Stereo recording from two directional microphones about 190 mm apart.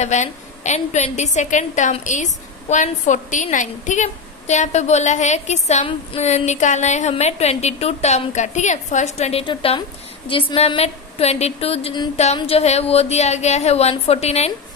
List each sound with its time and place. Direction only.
0.0 s a woman's voice: 40° left (ahead or behind)